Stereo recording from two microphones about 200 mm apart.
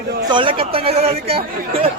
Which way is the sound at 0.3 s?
25° right (ahead or behind).